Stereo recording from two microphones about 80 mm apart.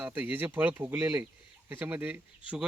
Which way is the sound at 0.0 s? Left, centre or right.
Right.